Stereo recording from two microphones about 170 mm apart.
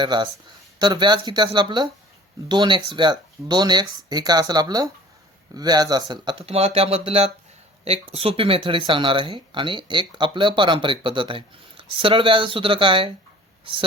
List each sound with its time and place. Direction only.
0.0 s speech: 25° right (ahead or behind)